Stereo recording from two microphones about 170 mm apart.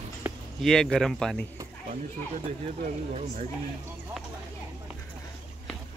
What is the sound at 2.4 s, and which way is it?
Speech, 40° right (ahead or behind).